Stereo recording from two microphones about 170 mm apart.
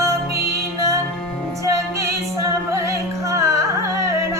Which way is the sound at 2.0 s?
15° right (ahead or behind).